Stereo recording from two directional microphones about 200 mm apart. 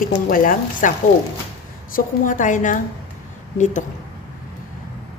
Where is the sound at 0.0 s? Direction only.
45° left (ahead or behind).